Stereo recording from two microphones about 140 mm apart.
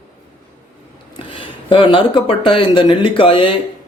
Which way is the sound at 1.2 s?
35° left (ahead or behind).